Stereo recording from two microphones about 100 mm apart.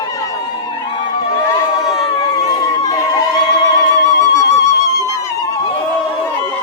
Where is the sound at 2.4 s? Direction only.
35° left (ahead or behind).